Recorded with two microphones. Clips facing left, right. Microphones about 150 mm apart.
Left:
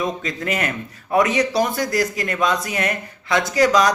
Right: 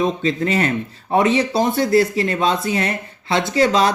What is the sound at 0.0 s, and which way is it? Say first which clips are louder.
Speech: right 5 dB; 30° right (ahead or behind).